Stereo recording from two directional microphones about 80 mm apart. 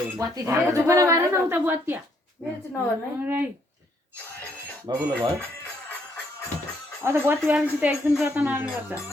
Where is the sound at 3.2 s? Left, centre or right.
Right.